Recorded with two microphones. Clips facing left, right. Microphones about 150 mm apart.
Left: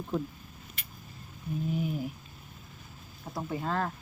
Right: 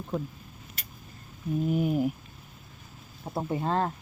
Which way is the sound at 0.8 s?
40° right (ahead or behind).